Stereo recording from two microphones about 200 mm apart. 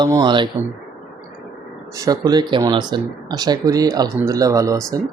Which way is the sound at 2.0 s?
15° right (ahead or behind).